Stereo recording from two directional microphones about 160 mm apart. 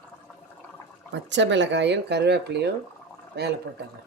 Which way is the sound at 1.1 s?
90° right.